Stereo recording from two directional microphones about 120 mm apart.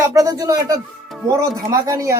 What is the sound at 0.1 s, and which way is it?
Speech, 30° right (ahead or behind).